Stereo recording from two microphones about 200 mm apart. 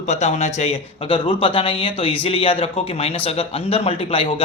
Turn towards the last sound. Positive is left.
turn(degrees=30)  # may be behind; listen again after turning